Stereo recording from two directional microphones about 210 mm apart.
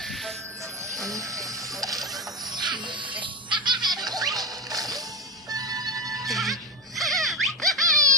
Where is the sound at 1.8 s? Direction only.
15° right (ahead or behind).